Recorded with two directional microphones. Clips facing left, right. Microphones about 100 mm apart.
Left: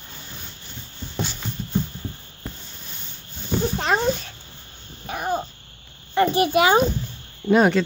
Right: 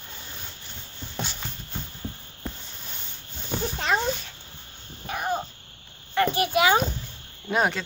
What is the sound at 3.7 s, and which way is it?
Cat, 35° left (ahead or behind).